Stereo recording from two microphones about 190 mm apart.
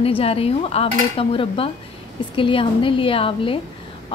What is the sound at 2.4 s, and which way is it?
Speech, 25° left (ahead or behind).